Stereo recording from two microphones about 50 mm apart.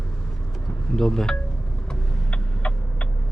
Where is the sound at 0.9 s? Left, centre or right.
Centre.